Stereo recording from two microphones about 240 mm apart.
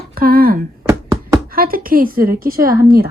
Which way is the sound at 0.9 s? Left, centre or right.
Centre.